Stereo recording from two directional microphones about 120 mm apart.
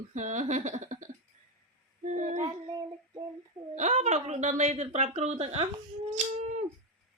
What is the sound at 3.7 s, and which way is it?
Speech, 75° right (ahead or behind).